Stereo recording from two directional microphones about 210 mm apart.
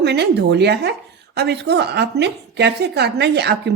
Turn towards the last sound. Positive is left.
turn(degrees=-55)  # may be behind; listen again after turning